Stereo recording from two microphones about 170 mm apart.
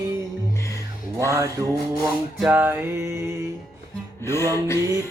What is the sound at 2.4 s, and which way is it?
Mantra, 10° right (ahead or behind).